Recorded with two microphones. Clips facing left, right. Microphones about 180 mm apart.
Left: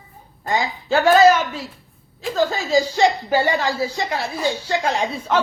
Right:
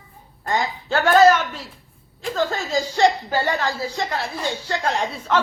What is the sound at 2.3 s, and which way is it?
A woman's voice, 10° left (ahead or behind).